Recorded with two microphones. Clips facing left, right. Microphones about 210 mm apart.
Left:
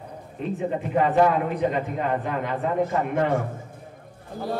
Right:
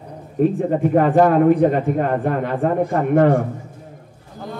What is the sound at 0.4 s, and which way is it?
A man's voice, 50° right (ahead or behind).